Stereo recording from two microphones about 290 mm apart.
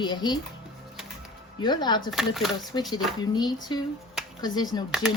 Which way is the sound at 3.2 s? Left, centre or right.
Centre.